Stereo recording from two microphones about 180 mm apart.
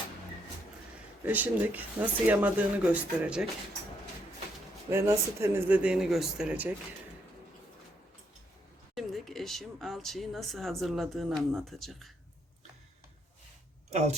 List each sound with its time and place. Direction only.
1.2 s speech: 10° right (ahead or behind)
4.9 s speech: 15° right (ahead or behind)
9.0 s speech: centre (ahead or behind)
13.9 s speech: 40° right (ahead or behind)